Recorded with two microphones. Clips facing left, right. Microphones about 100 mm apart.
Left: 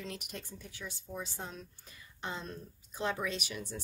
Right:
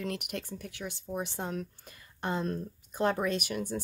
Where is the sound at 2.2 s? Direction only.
50° right (ahead or behind).